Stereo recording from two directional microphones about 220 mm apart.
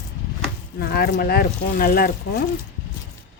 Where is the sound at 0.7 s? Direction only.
45° left (ahead or behind).